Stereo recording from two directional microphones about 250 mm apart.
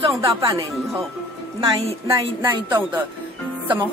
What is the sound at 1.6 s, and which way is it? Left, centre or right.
Speech, centre.